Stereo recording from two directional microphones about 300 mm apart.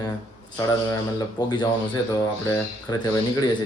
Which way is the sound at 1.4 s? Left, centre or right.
Centre.